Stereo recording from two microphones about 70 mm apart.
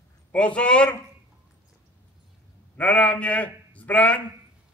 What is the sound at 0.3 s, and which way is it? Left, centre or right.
Speech, centre.